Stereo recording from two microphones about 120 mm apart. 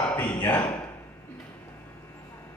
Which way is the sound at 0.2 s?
15° left (ahead or behind).